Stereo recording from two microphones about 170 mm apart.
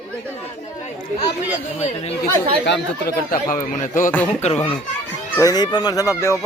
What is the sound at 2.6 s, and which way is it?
Speech, 80° left.